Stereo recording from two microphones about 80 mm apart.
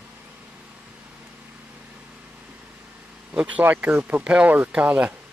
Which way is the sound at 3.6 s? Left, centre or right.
Right.